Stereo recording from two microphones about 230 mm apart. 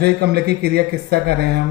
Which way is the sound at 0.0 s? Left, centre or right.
Right.